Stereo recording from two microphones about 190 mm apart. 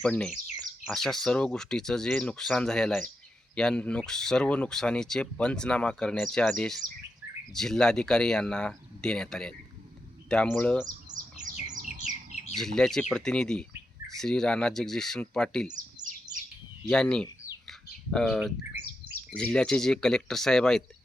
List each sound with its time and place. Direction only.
0.0 s speech: 5° left (ahead or behind)
11.1 s bird: 20° right (ahead or behind)
11.8 s bird: 45° right (ahead or behind)
12.5 s speech: 5° left (ahead or behind)
16.9 s speech: 5° left (ahead or behind)
18.3 s speech: 10° right (ahead or behind)
19.3 s speech: 5° left (ahead or behind)